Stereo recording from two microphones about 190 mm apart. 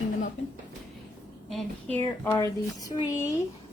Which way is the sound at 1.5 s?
10° left (ahead or behind).